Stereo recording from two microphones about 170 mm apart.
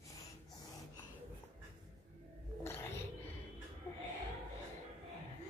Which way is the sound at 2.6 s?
15° left (ahead or behind).